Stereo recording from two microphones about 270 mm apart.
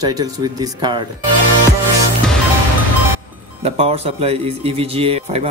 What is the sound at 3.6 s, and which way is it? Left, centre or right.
Speech, right.